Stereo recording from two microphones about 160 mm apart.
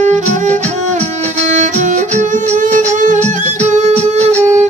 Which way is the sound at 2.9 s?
50° right (ahead or behind).